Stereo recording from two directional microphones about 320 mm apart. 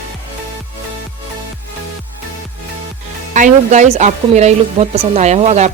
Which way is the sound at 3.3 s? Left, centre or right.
Right.